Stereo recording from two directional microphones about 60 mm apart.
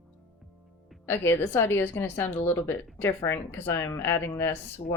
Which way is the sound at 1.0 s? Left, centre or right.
Left.